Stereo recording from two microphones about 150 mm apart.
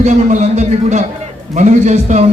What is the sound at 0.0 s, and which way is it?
A man's voice, 50° right (ahead or behind).